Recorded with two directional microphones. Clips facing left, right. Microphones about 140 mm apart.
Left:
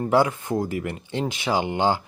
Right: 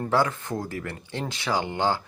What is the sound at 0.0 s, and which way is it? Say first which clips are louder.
Speech: left 4 dB; 15° left (ahead or behind).